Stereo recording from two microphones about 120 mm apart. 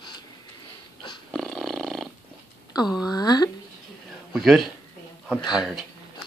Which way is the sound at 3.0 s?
35° left (ahead or behind).